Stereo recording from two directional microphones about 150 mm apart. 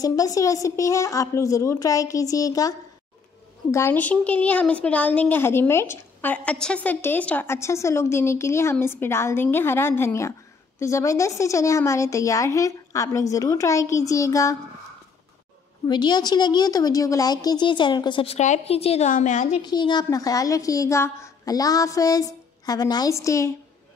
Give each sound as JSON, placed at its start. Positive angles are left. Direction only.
{"t": 0.0, "sound": "a woman's voice", "side_deg": 25}
{"t": 3.7, "sound": "a woman's voice", "side_deg": 15}
{"t": 15.9, "sound": "a woman's voice", "side_deg": 30}
{"t": 19.6, "sound": "a woman's voice", "side_deg": 30}